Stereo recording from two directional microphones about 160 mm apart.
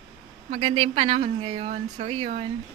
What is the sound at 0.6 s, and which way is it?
Speech, 35° right (ahead or behind).